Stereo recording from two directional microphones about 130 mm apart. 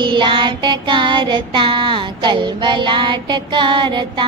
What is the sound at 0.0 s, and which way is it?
Child singing, 40° right (ahead or behind).